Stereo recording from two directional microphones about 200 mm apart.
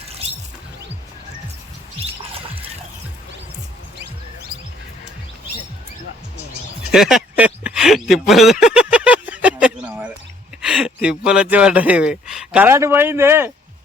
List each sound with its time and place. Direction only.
2.0 s music: 30° right (ahead or behind)
6.9 s a sound: centre (ahead or behind)
10.6 s speech: 5° right (ahead or behind)